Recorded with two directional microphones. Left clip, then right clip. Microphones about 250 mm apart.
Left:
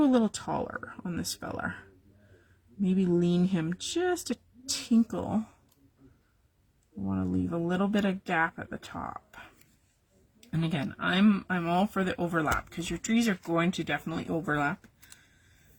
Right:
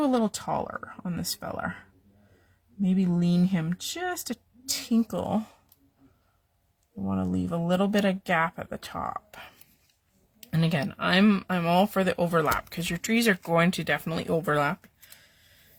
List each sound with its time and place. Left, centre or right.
0.0 s speech: right
7.0 s speech: right
10.5 s speech: right
13.5 s speech: right